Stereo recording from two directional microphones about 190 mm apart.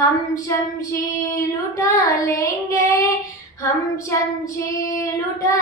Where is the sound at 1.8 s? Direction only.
15° left (ahead or behind).